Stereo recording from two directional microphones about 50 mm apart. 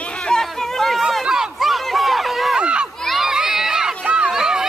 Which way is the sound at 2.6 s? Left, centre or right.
Right.